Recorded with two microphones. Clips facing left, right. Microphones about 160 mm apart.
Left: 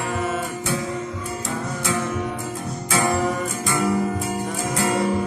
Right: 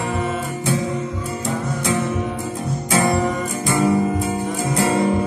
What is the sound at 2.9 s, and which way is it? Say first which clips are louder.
Music: right 2 dB; 20° right (ahead or behind).